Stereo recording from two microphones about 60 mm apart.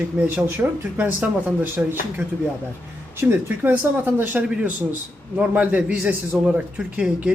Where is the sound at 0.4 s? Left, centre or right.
Right.